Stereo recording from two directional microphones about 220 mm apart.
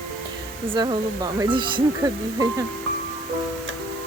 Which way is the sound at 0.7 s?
20° right (ahead or behind).